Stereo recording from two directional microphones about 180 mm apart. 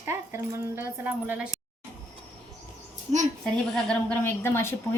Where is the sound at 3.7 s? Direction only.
5° left (ahead or behind).